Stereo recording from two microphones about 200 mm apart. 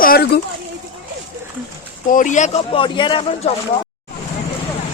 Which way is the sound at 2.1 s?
40° left (ahead or behind).